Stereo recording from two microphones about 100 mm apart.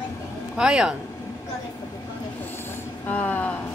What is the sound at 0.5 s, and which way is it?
Speech, 10° right (ahead or behind).